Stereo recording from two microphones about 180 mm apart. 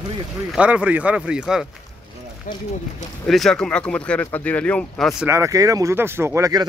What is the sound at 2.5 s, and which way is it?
Speech, 45° left (ahead or behind).